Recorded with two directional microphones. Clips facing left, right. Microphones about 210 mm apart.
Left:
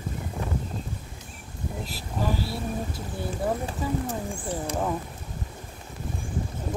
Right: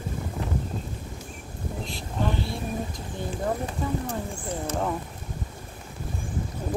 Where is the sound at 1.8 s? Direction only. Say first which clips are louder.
Even; 5° left (ahead or behind).